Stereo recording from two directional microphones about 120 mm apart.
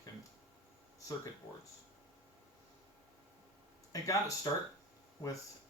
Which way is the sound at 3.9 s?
30° left (ahead or behind).